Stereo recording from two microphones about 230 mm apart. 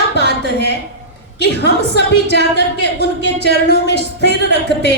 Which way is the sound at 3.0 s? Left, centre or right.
Left.